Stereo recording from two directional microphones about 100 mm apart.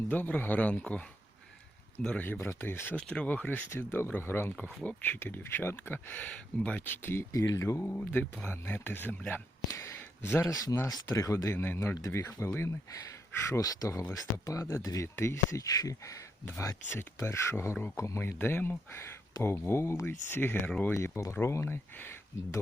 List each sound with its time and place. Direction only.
0.1 s a man's voice: 20° left (ahead or behind)
2.2 s a man's voice: 20° left (ahead or behind)
7.9 s a man's voice: 20° left (ahead or behind)
9.6 s a sound: 30° left (ahead or behind)
10.5 s a man's voice: 40° left (ahead or behind); by 20.9 s 15° left (ahead or behind)
20.9 s speech: 30° left (ahead or behind)